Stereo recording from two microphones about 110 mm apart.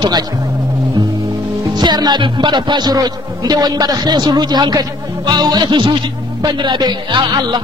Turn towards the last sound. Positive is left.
turn(degrees=-40)  # may be behind; listen again after turning